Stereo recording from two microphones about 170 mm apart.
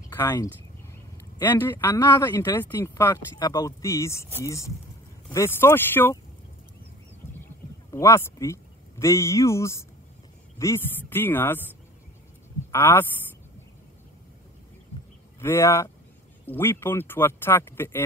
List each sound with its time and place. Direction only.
0.1 s speech: 15° left (ahead or behind)
7.9 s speech: 15° left (ahead or behind)
12.7 s speech: 15° left (ahead or behind)
15.4 s speech: 15° left (ahead or behind)